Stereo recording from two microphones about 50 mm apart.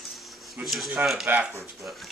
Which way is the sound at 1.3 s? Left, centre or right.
Right.